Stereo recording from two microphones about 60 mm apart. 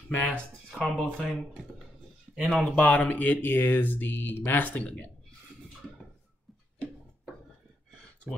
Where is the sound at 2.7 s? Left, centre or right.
Left.